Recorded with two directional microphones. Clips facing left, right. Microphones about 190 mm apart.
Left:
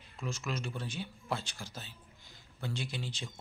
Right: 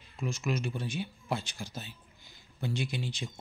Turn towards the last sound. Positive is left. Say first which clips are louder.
# right 5 dB
turn(degrees=-15)  # may be behind; listen again after turning